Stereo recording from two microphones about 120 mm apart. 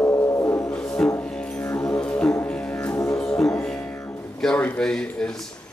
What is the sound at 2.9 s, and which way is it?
Music, 30° left (ahead or behind).